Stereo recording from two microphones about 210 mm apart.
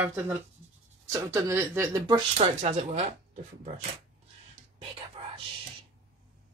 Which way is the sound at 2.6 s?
30° right (ahead or behind).